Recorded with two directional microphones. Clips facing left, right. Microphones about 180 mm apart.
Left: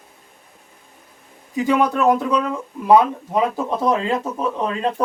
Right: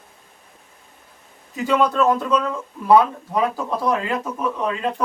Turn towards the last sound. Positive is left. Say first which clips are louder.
# left 1 dB
turn(degrees=30)  # may be behind; listen again after turning